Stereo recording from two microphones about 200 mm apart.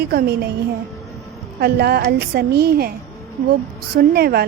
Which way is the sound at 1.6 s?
55° right (ahead or behind).